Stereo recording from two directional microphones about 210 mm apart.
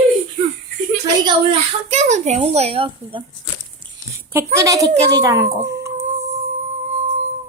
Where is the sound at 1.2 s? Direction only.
30° right (ahead or behind).